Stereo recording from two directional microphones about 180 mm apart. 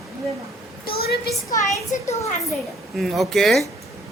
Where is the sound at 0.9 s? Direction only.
60° left (ahead or behind).